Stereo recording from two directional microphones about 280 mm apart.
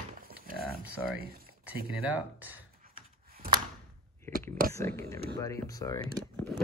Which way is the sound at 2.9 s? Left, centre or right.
Right.